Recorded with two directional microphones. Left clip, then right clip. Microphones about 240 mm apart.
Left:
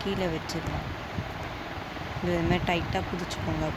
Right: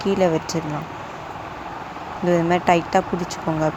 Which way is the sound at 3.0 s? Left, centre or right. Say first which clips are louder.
Right 12 dB; centre.